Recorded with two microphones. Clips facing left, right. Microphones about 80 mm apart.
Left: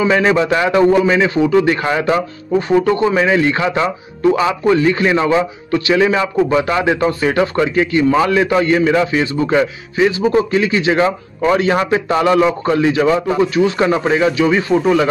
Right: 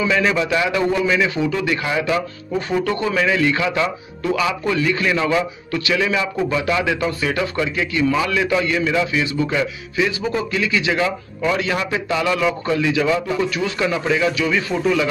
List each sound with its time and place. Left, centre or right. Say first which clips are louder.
0.0 s speech: left 5 dB; left
2.7 s speech: left 7 dB; left